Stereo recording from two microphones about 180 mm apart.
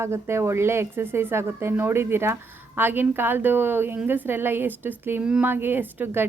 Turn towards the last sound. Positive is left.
turn(degrees=-10)  # may be behind; listen again after turning